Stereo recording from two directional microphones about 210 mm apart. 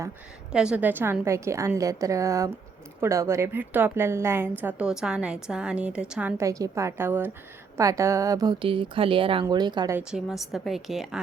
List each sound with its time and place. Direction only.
0.5 s a woman's voice: 5° right (ahead or behind)
10.0 s a woman's voice: 5° right (ahead or behind)